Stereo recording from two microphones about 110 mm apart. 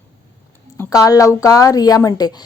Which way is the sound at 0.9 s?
30° left (ahead or behind).